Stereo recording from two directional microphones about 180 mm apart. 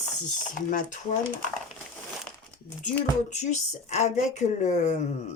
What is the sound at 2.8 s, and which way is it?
Speech, 40° left (ahead or behind).